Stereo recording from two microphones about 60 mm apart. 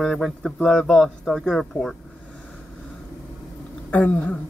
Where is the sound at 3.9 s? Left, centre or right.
Left.